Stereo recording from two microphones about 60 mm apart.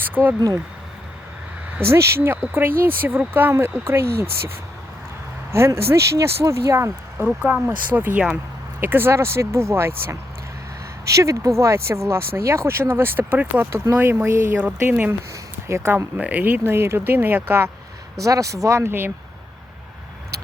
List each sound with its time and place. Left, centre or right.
0.0 s a sound: right
0.3 s speech: right
1.9 s speech: right
3.5 s speech: right
7.4 s speech: right
11.1 s speech: right
14.6 s speech: right
15.6 s speech: right
16.1 s speech: right
16.4 s speech: right
18.2 s speech: right
18.8 s speech: right